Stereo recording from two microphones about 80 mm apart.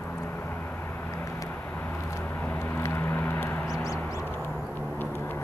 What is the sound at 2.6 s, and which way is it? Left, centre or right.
Vehicle, left.